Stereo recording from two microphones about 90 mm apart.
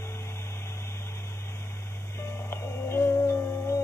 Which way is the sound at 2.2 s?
30° left (ahead or behind).